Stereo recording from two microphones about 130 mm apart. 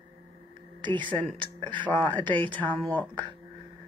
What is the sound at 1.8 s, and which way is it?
Speech, 10° left (ahead or behind).